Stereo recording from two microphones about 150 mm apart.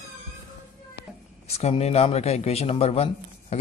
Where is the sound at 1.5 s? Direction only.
45° left (ahead or behind).